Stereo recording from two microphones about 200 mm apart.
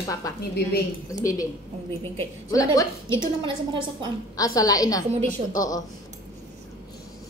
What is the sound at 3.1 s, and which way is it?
Speech, 25° right (ahead or behind).